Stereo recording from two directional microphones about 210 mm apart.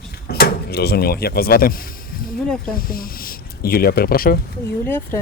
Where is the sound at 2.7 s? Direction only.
45° left (ahead or behind).